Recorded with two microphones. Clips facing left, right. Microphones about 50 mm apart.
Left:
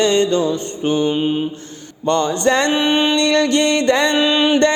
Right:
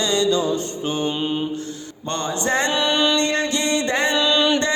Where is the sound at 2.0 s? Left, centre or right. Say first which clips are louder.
Left 7 dB; left.